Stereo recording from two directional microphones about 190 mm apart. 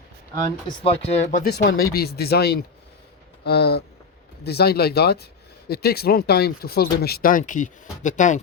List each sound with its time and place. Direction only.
0.9 s speech: 35° left (ahead or behind)
1.5 s speech: 60° left (ahead or behind); by 1.9 s 75° left (ahead or behind)
2.0 s speech: 55° left (ahead or behind)